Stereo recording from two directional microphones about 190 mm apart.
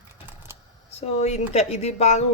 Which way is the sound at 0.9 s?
35° left (ahead or behind).